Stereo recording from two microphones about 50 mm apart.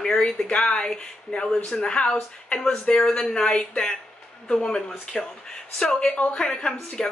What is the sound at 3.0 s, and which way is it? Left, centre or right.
Speech, centre.